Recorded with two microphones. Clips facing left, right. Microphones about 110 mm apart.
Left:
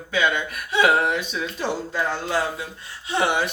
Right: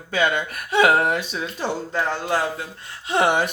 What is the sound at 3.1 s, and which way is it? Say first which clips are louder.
Speech: right 3 dB; 50° right (ahead or behind).